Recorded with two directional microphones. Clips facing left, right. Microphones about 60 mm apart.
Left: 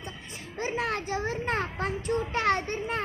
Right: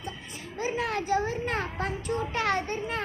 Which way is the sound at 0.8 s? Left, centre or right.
Left.